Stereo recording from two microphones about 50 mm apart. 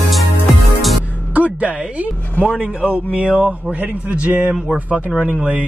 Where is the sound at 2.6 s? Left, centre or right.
Right.